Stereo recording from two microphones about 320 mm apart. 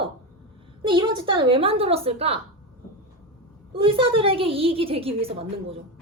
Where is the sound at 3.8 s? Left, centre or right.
Centre.